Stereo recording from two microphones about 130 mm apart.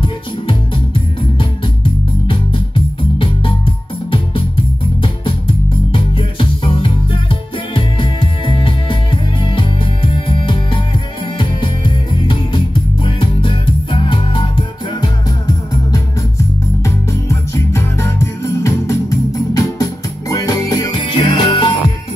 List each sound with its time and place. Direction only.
0.0 s music: 40° left (ahead or behind)
5.9 s music: 40° left (ahead or behind)
15.0 s music: 30° left (ahead or behind)